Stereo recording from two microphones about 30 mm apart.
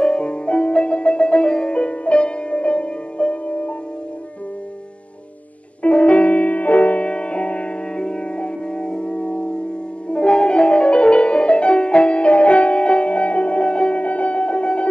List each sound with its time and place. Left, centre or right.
0.0 s music: left
5.8 s music: left
7.1 s music: left
7.9 s music: left
14.0 s music: left